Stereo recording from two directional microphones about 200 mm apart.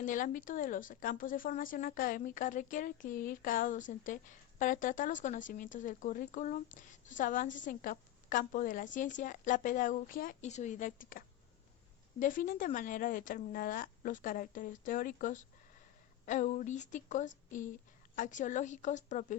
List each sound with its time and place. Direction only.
0.0 s speech: 40° left (ahead or behind)
12.2 s speech: 45° left (ahead or behind)